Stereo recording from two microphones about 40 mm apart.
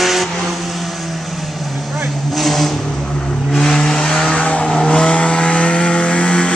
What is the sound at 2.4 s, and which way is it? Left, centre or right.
Vehicle, centre.